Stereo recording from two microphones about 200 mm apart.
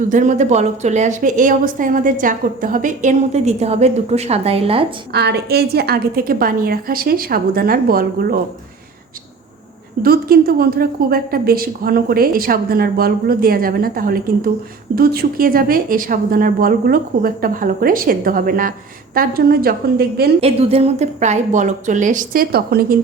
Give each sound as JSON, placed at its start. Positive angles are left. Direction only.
{"t": 0.1, "sound": "a woman's voice", "side_deg": -40}
{"t": 5.1, "sound": "a woman's voice", "side_deg": -55}
{"t": 10.0, "sound": "a woman's voice", "side_deg": -50}
{"t": 20.4, "sound": "a woman's voice", "side_deg": -30}